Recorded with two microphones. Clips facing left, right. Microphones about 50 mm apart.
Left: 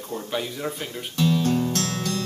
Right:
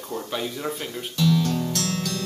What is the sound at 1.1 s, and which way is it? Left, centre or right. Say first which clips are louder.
Music: left 1 dB; left.